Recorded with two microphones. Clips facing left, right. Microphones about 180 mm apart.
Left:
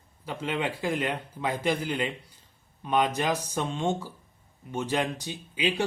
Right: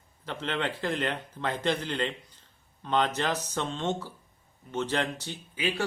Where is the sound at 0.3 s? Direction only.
10° left (ahead or behind).